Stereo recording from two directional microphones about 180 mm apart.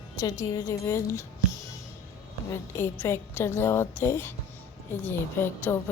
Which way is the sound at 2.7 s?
15° left (ahead or behind).